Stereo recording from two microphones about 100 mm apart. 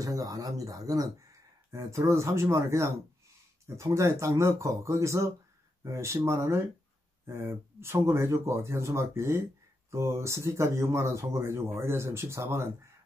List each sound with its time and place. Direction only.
0.0 s speech: 35° right (ahead or behind)